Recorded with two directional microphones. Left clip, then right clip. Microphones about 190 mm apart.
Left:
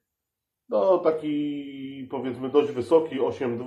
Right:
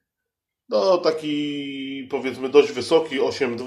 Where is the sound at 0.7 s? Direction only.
35° right (ahead or behind).